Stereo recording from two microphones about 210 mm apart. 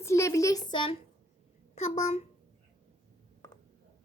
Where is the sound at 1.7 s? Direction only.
35° left (ahead or behind).